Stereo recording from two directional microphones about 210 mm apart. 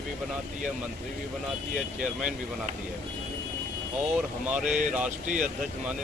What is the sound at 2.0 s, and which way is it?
Speech, 5° right (ahead or behind).